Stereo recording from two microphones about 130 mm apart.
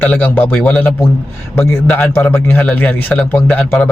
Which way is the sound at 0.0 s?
15° left (ahead or behind).